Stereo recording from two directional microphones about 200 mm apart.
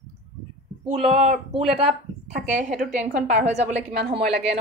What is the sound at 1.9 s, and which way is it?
A woman's voice, 35° right (ahead or behind).